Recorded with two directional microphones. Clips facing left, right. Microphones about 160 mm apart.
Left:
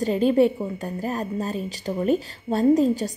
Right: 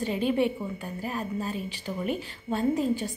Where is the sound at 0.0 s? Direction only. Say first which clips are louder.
Left 7 dB; 40° left (ahead or behind).